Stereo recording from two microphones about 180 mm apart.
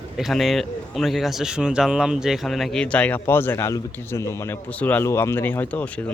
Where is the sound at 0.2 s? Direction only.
Centre (ahead or behind).